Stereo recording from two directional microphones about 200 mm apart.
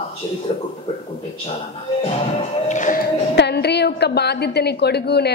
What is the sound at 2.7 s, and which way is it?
Music, 40° left (ahead or behind).